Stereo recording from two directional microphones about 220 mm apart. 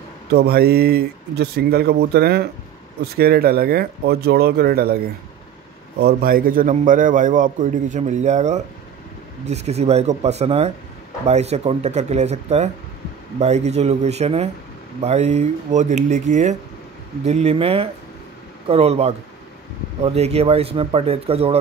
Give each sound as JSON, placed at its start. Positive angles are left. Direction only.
{"t": 0.3, "sound": "a man's voice", "side_deg": -45}